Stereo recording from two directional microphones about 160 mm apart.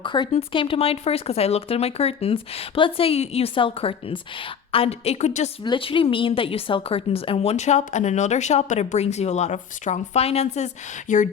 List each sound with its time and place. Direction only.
0.0 s speech: 30° left (ahead or behind)
5.6 s a woman's voice: 30° left (ahead or behind)
11.1 s a woman's voice: 55° left (ahead or behind)